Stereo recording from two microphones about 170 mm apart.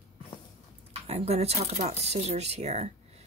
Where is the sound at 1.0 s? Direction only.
35° right (ahead or behind).